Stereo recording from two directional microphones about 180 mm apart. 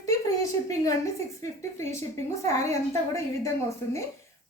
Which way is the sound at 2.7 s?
15° left (ahead or behind).